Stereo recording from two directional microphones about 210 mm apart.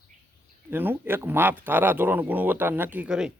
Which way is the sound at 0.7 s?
10° right (ahead or behind).